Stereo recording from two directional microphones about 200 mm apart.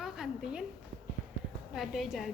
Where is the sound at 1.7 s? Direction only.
Centre (ahead or behind).